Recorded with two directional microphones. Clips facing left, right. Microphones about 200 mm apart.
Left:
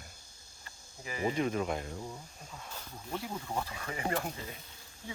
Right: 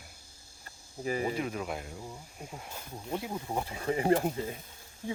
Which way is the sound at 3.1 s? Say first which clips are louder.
Right 3 dB; 20° right (ahead or behind).